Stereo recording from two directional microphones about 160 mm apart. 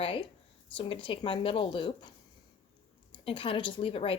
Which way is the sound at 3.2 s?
35° left (ahead or behind).